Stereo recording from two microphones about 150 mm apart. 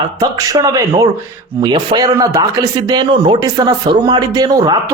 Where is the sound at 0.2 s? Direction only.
25° right (ahead or behind).